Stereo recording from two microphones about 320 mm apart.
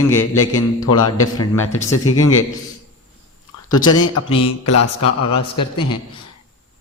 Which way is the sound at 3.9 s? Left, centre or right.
Left.